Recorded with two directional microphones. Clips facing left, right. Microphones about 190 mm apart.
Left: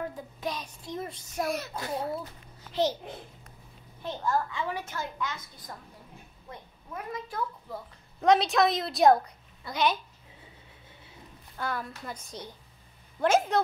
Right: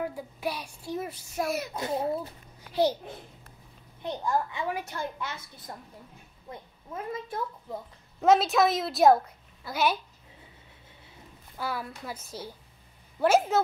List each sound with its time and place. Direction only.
0.0 s a child's voice: 10° right (ahead or behind)
1.8 s a woman's voice: 20° right (ahead or behind)
2.7 s a child's voice: 10° right (ahead or behind)
4.0 s a child's voice: 15° right (ahead or behind)
5.2 s a woman's voice: 30° right (ahead or behind)
8.2 s a woman's voice: 5° right (ahead or behind)
11.5 s a child's voice: 5° right (ahead or behind)